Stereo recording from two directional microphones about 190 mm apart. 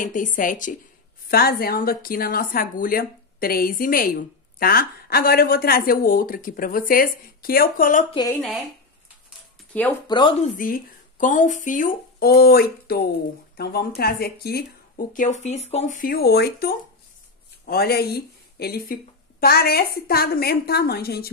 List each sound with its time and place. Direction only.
0.0 s a woman's voice: 45° left (ahead or behind)
8.1 s speech: 20° left (ahead or behind)
8.4 s speech: centre (ahead or behind)
10.0 s speech: 25° left (ahead or behind)
10.6 s a woman's voice: 45° left (ahead or behind)